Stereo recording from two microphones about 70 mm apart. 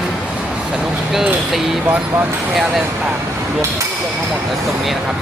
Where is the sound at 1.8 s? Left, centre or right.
Right.